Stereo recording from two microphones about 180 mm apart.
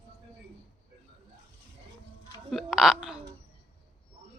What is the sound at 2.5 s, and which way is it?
Speech, centre (ahead or behind).